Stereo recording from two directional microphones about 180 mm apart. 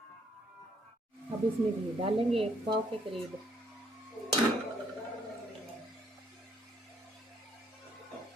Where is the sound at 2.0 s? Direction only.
30° right (ahead or behind).